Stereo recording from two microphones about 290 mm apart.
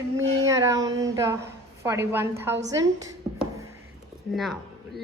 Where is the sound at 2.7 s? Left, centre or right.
Centre.